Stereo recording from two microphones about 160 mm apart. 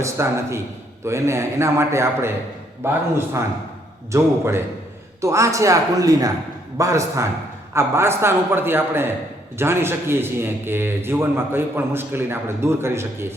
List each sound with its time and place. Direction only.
0.0 s a man's voice: 15° right (ahead or behind)